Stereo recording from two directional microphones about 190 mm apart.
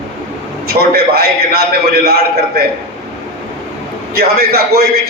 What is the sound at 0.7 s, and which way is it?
A man's voice, 55° right (ahead or behind).